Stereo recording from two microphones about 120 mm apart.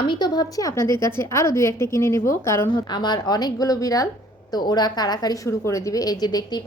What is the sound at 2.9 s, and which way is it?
A woman's voice, 40° left (ahead or behind).